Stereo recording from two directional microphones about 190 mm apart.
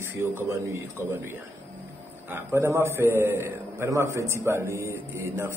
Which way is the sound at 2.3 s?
15° right (ahead or behind).